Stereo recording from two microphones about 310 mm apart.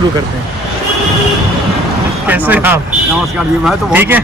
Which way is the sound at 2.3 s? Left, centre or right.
Centre.